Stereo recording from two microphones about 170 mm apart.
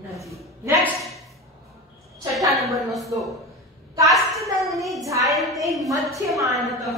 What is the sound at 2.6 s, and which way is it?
Speech, centre (ahead or behind).